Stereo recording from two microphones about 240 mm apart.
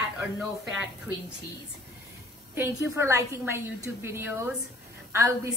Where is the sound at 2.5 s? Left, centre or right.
Centre.